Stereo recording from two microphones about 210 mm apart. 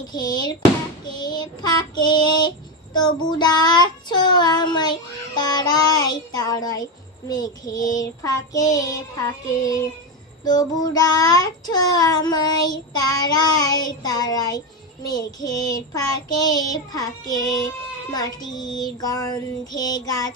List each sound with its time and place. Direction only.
0.1 s child singing: 20° left (ahead or behind)
10.4 s child singing: 20° left (ahead or behind)